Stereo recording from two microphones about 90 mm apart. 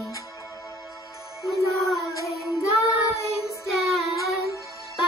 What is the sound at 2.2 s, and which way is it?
Music, centre (ahead or behind).